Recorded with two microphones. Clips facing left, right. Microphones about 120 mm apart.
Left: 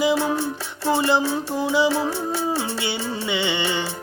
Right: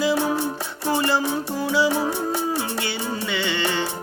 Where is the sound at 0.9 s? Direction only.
15° left (ahead or behind).